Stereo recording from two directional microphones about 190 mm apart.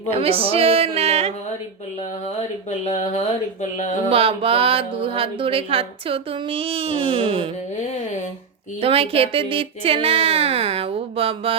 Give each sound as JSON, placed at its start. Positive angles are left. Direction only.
{"t": 0.1, "sound": "music", "side_deg": -30}
{"t": 2.6, "sound": "speech", "side_deg": 35}
{"t": 4.1, "sound": "speech", "side_deg": -30}
{"t": 8.8, "sound": "speech", "side_deg": -30}